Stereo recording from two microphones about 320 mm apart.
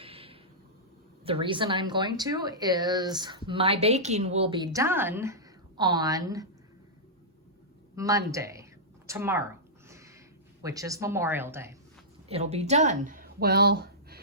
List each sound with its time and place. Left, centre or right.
0.0 s a sound: centre
1.2 s a woman's voice: centre
7.9 s a woman's voice: centre
9.0 s a sound: centre
10.6 s a woman's voice: centre
12.3 s speech: centre